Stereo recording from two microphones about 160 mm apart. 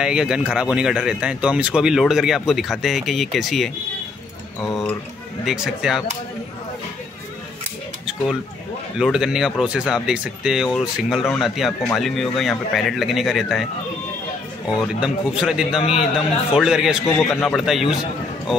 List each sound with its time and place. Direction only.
0.0 s speech: 5° right (ahead or behind)
5.4 s speech: centre (ahead or behind)
8.9 s speech: 5° right (ahead or behind)
14.8 s speech: 5° right (ahead or behind)
15.8 s a man's voice: 35° left (ahead or behind)
16.5 s speech: 5° right (ahead or behind)